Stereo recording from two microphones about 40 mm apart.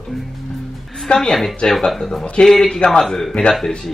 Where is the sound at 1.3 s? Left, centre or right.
Centre.